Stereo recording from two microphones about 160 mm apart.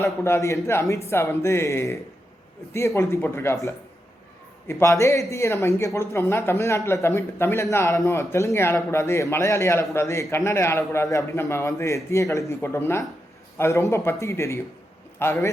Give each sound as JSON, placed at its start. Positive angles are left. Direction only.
{"t": 0.0, "sound": "speech", "side_deg": 15}